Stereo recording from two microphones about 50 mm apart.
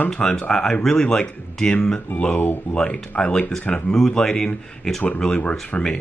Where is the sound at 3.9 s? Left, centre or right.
Centre.